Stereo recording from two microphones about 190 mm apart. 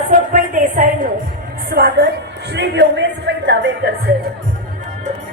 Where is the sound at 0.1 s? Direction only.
45° right (ahead or behind).